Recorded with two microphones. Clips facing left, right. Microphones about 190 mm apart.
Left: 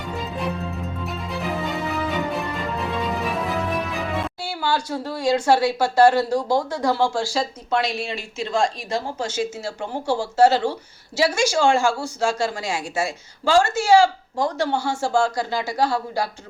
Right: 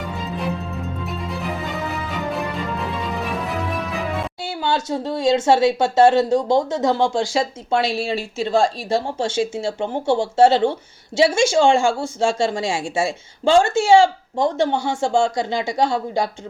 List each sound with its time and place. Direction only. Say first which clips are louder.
1.0 s music: left 1 dB; centre (ahead or behind)
4.4 s speech: right 4 dB; 20° right (ahead or behind)